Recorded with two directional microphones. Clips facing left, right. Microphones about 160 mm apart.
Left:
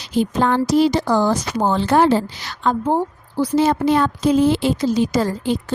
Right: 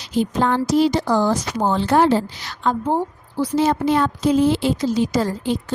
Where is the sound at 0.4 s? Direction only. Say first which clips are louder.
Left 2 dB; 70° left (ahead or behind).